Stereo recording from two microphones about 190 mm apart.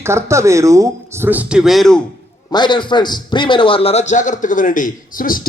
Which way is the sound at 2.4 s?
25° left (ahead or behind).